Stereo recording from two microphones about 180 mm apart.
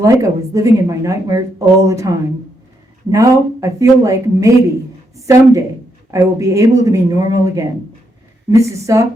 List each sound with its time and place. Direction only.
0.0 s speech: 15° right (ahead or behind)